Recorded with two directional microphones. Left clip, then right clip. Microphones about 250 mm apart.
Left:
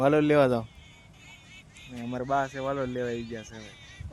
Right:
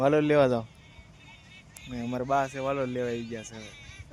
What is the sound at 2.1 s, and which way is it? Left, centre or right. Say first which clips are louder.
Speech: right 1 dB; centre.